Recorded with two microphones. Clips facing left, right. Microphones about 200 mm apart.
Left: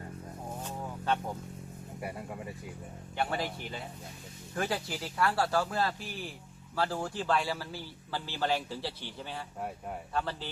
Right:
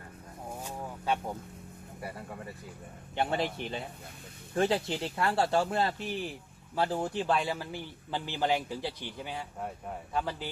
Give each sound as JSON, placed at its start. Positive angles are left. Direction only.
{"t": 0.5, "sound": "a sound", "side_deg": -10}
{"t": 2.0, "sound": "speech", "side_deg": 15}
{"t": 3.2, "sound": "a man's voice", "side_deg": -25}